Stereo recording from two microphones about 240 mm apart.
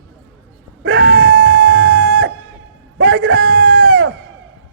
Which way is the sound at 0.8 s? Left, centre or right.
Right.